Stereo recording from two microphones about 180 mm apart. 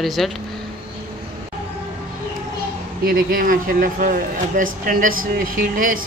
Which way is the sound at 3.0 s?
50° right (ahead or behind).